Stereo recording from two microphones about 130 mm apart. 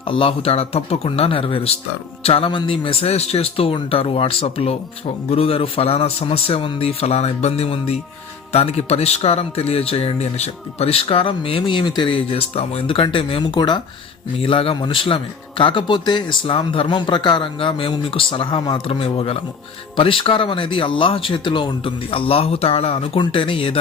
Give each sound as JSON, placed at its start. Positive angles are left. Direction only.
{"t": 0.0, "sound": "a man's voice", "side_deg": 45}